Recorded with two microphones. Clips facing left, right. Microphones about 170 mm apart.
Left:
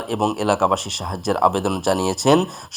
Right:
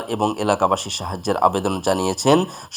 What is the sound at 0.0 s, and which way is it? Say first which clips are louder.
Speech: even; centre (ahead or behind).